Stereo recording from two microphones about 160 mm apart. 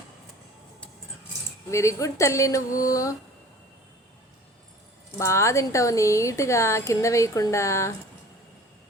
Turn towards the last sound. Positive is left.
turn(degrees=15)  # may be behind; listen again after turning